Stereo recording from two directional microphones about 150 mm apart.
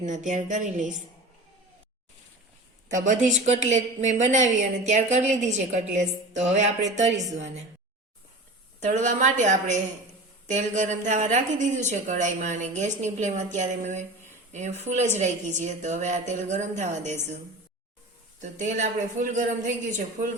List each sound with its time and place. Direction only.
0.3 s speech: 55° right (ahead or behind)
2.9 s a woman's voice: 55° right (ahead or behind)
8.8 s a woman's voice: 50° right (ahead or behind)
18.3 s speech: 55° right (ahead or behind)